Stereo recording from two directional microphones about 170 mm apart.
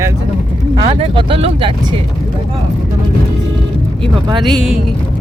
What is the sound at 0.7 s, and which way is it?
Speech, 30° right (ahead or behind).